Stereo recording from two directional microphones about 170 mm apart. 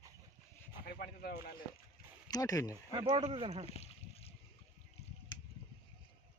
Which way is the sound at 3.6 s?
40° left (ahead or behind).